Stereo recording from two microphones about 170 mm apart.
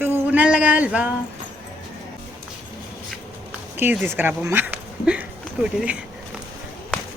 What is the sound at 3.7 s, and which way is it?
Speech, 10° right (ahead or behind).